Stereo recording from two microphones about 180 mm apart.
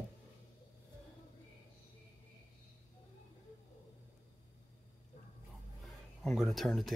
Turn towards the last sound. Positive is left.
turn(degrees=0)  # may be behind; listen again after turning